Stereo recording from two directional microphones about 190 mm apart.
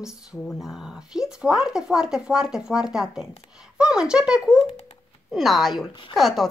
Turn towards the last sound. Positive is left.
turn(degrees=0)  # may be behind; listen again after turning